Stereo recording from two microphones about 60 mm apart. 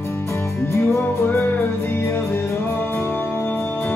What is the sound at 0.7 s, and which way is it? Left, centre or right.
Music, left.